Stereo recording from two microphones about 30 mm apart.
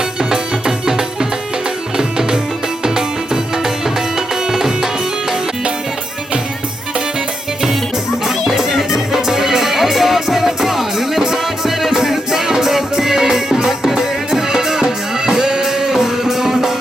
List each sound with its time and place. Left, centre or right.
0.2 s music: right
8.2 s music: centre